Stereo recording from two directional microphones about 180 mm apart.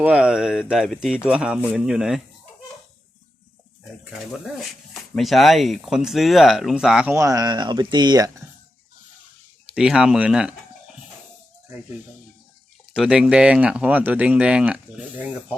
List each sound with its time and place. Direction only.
0.0 s speech: 5° right (ahead or behind)
5.1 s speech: centre (ahead or behind)
7.2 s speech: 20° right (ahead or behind)
9.7 s speech: 5° right (ahead or behind)
12.9 s speech: 5° right (ahead or behind)